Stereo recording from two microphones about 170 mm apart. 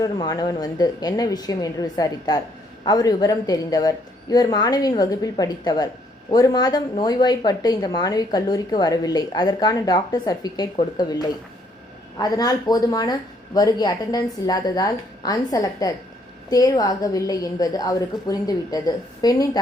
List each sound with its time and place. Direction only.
0.0 s a woman's voice: 20° left (ahead or behind)
12.2 s a woman's voice: 20° left (ahead or behind)